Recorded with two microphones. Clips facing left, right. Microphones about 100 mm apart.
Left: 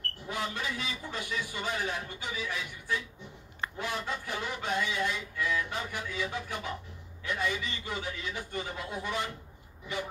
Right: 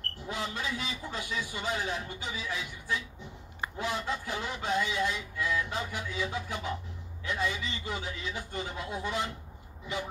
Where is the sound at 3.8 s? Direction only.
25° right (ahead or behind).